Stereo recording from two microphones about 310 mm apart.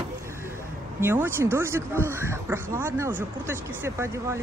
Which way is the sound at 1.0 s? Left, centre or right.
Centre.